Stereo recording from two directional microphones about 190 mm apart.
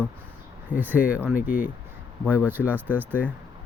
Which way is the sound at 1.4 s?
45° left (ahead or behind).